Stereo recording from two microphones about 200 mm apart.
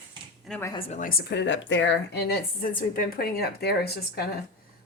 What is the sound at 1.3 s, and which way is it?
A woman's voice, 65° left (ahead or behind).